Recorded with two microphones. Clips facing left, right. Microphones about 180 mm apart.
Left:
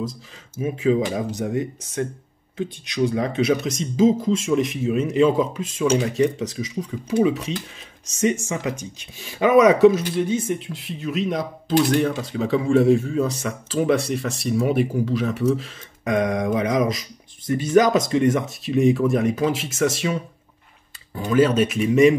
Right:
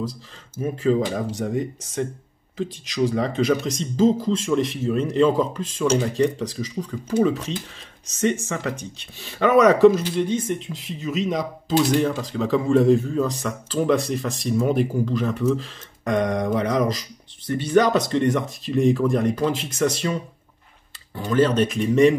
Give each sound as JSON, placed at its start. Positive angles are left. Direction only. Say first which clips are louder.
{"t": 0.6, "sound": "speech", "louder": "left 1 dB", "side_deg": 5}
{"t": 8.5, "sound": "speech", "louder": "left 1 dB", "side_deg": 10}
{"t": 21.2, "sound": "speech", "louder": "left 1 dB", "side_deg": 10}